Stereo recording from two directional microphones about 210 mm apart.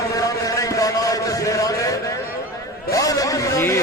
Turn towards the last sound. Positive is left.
turn(degrees=15)  # may be behind; listen again after turning